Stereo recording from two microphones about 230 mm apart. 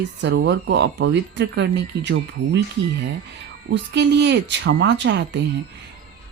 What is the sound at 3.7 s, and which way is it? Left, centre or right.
Speech, right.